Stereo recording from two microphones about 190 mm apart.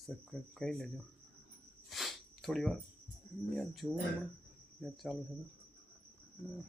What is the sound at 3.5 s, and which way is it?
Speech, centre (ahead or behind).